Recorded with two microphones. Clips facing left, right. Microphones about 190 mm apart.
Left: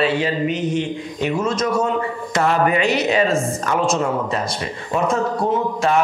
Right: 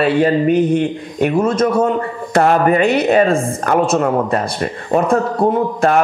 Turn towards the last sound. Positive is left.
turn(degrees=-55)  # may be behind; listen again after turning